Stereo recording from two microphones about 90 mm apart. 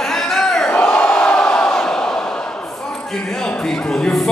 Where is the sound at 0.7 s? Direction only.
20° left (ahead or behind).